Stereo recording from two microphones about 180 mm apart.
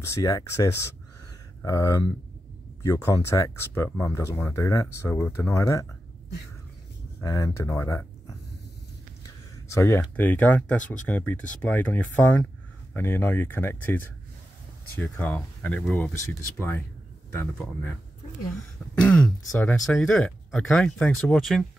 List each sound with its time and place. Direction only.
0.0 s speech: 15° left (ahead or behind)
7.2 s speech: 15° left (ahead or behind)
9.2 s speech: 15° left (ahead or behind)
18.9 s speech: 5° left (ahead or behind)